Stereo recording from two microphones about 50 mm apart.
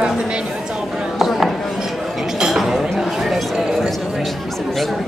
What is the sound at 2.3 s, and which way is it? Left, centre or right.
Chink, centre.